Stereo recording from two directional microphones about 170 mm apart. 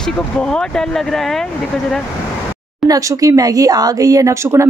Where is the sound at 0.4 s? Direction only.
5° left (ahead or behind).